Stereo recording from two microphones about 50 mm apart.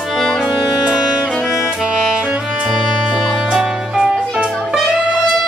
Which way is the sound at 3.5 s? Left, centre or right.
Centre.